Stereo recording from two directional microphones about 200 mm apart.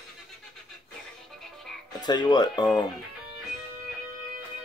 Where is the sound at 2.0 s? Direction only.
20° left (ahead or behind).